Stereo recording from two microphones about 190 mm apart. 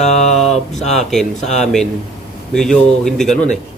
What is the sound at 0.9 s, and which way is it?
A man's voice, centre (ahead or behind).